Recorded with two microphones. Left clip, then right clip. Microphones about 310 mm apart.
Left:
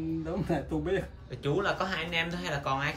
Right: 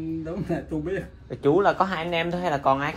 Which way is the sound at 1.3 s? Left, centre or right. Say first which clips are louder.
Right 10 dB; centre.